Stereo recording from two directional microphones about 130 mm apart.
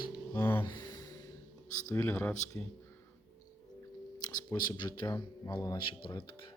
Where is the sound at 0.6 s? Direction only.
35° left (ahead or behind).